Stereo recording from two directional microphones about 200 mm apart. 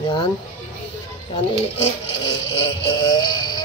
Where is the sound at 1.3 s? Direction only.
25° left (ahead or behind).